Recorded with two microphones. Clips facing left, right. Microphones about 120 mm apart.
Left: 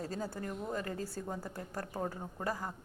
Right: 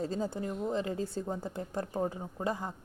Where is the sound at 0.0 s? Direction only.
25° right (ahead or behind).